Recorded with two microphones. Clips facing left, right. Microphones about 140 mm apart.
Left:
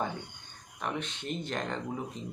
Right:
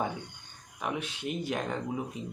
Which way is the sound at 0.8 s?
10° right (ahead or behind).